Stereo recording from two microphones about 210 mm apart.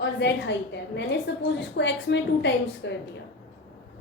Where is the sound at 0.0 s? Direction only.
55° left (ahead or behind).